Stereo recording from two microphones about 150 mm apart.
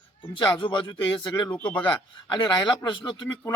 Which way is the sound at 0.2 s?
30° left (ahead or behind).